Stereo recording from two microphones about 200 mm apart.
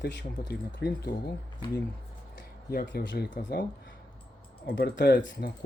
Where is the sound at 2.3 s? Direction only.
55° left (ahead or behind).